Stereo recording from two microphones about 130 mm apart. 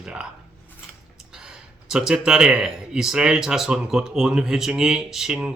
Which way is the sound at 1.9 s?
5° right (ahead or behind).